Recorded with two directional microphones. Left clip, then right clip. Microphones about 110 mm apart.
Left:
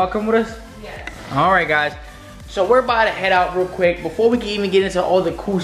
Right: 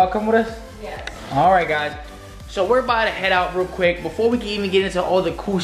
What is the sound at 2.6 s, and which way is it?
Speech, 10° left (ahead or behind).